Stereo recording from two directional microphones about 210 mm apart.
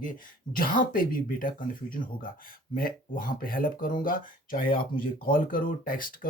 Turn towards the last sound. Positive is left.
turn(degrees=40)  # may be behind; listen again after turning